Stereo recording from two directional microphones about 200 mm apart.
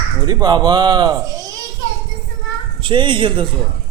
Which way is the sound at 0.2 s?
20° right (ahead or behind).